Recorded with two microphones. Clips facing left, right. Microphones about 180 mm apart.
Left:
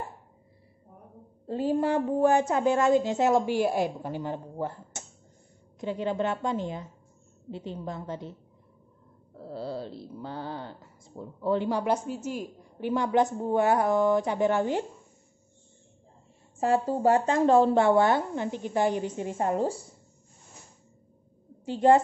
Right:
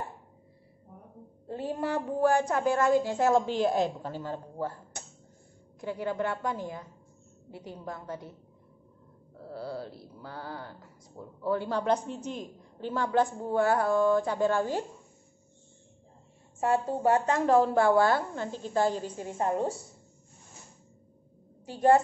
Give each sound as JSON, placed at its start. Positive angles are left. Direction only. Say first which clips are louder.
{"t": 1.5, "sound": "speech", "louder": "left 6 dB", "side_deg": 25}
{"t": 9.4, "sound": "speech", "louder": "left 3 dB", "side_deg": 25}
{"t": 16.5, "sound": "speech", "louder": "left 2 dB", "side_deg": 30}
{"t": 21.6, "sound": "speech", "louder": "left 2 dB", "side_deg": 25}